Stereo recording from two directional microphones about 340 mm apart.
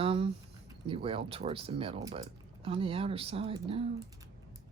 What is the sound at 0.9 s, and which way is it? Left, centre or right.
Speech, centre.